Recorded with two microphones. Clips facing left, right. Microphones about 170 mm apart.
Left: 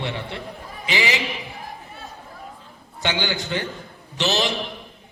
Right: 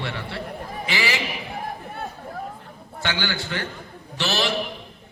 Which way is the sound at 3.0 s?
20° left (ahead or behind).